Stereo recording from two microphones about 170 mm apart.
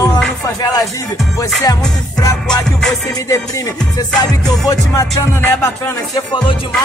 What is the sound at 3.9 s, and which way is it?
Music, 20° left (ahead or behind).